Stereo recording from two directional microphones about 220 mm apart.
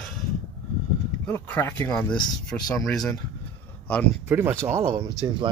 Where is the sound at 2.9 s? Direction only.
Centre (ahead or behind).